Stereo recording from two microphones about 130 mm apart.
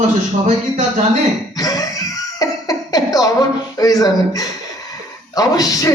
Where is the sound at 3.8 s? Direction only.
30° left (ahead or behind).